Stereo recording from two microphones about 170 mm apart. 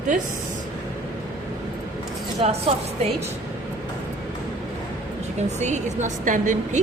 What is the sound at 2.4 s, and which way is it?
Speech, 35° right (ahead or behind).